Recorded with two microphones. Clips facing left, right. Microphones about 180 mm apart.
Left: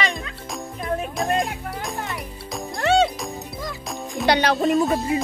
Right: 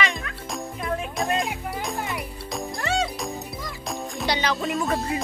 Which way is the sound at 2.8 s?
65° left (ahead or behind).